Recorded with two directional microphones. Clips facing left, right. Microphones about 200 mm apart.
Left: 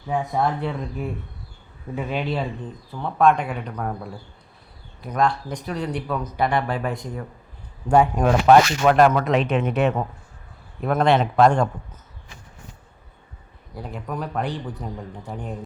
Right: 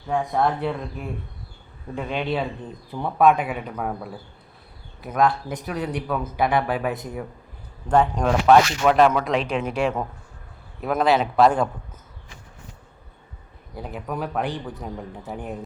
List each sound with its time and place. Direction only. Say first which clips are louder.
0.1 s speech: right 1 dB; centre (ahead or behind)
2.9 s speech: right 1 dB; 10° right (ahead or behind)
7.9 s speech: left 2 dB; 10° left (ahead or behind)
13.7 s speech: right 1 dB; 5° right (ahead or behind)